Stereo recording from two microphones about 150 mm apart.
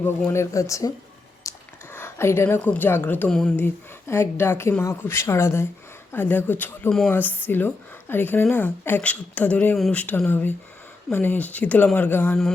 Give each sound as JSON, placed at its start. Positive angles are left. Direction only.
{"t": 0.0, "sound": "speech", "side_deg": 15}
{"t": 4.1, "sound": "speech", "side_deg": 15}